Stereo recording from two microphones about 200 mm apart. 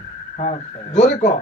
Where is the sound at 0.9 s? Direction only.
35° left (ahead or behind).